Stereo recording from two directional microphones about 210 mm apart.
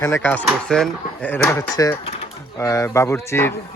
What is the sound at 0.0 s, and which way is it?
Speech, 10° left (ahead or behind).